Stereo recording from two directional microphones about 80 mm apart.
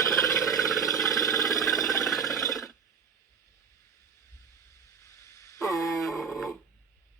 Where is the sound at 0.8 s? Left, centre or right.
Left.